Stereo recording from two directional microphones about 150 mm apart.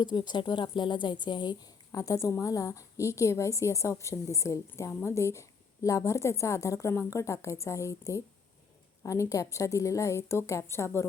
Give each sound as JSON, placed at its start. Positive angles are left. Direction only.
{"t": 0.0, "sound": "a woman's voice", "side_deg": 30}